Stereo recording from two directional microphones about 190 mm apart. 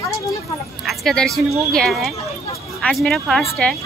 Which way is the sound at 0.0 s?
15° left (ahead or behind).